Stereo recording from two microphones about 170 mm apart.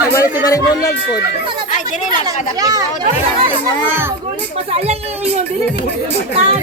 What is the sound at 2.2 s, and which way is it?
Speech, 20° right (ahead or behind).